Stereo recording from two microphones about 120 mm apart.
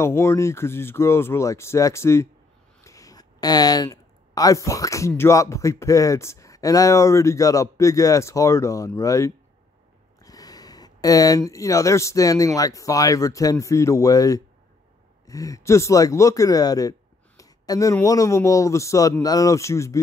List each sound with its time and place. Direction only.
0.0 s speech: 25° left (ahead or behind)
17.4 s a sound: 30° left (ahead or behind)
18.0 s speech: 30° left (ahead or behind)